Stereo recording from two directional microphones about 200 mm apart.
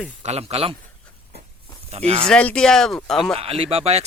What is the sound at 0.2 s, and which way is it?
Speech, 30° right (ahead or behind).